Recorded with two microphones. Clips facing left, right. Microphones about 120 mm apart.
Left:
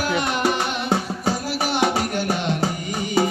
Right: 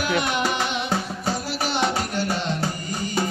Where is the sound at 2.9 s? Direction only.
80° left.